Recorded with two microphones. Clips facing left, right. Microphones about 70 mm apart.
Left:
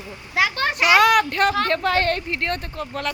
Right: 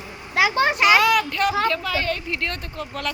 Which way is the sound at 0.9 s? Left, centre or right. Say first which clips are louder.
Left 7 dB; left.